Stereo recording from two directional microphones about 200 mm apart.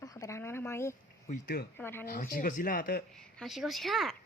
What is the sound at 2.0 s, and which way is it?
Speech, 45° left (ahead or behind).